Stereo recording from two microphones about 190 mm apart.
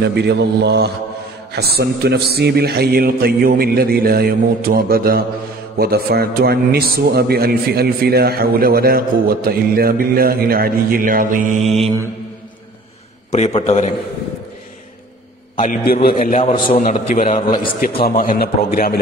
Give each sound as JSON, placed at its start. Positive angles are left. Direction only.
{"t": 0.0, "sound": "a man's voice", "side_deg": -60}
{"t": 13.3, "sound": "a man's voice", "side_deg": 30}
{"t": 15.6, "sound": "a man's voice", "side_deg": 45}